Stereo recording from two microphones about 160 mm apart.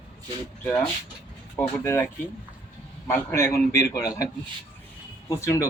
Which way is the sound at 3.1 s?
15° left (ahead or behind).